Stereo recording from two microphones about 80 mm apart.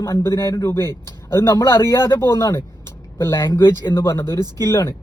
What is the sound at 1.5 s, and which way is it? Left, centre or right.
Speech, left.